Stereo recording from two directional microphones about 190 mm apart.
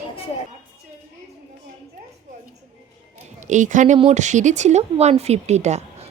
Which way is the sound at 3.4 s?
40° right (ahead or behind).